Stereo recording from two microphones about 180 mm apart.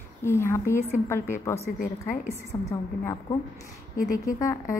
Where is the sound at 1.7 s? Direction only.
50° left (ahead or behind).